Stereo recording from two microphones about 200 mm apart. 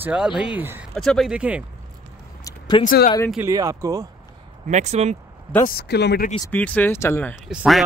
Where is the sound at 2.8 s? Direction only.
40° left (ahead or behind).